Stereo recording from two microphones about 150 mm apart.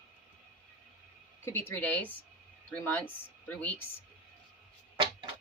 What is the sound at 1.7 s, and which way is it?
Speech, 15° left (ahead or behind).